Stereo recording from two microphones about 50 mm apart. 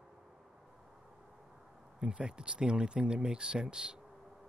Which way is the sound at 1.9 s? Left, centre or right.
Centre.